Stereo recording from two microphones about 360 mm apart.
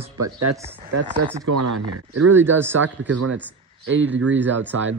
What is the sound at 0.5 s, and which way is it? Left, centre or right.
Speech, centre.